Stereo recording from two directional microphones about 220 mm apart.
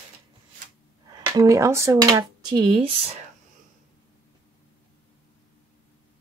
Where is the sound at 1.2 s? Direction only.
15° right (ahead or behind).